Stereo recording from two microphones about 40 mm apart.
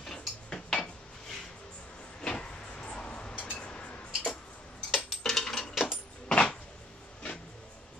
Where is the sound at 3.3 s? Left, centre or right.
Left.